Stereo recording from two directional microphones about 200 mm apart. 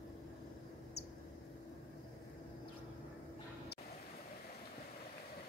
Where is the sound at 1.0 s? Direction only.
55° left (ahead or behind).